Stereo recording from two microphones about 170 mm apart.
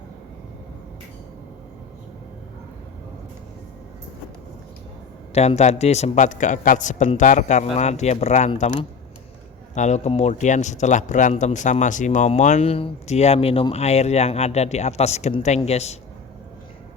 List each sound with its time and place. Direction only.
5.3 s a man's voice: 40° left (ahead or behind)